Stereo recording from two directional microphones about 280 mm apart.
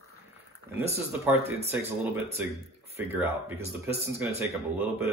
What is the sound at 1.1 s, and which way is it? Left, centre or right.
Speech, centre.